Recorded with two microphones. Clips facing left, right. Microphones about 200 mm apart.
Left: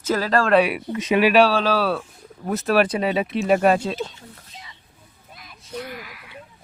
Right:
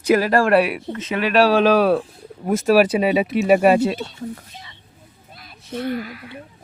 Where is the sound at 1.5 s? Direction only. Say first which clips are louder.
Right 6 dB; 15° right (ahead or behind).